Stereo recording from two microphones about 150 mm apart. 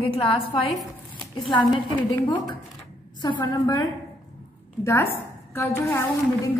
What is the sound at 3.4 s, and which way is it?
A woman's voice, 25° left (ahead or behind).